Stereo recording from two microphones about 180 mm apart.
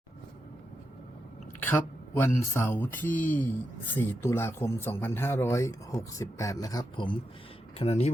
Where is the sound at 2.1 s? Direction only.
15° left (ahead or behind).